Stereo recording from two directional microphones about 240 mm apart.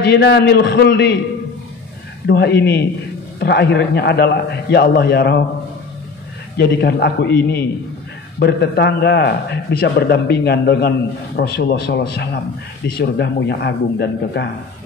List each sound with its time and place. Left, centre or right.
0.1 s a man's voice: left
2.2 s a man's voice: left
6.5 s a man's voice: left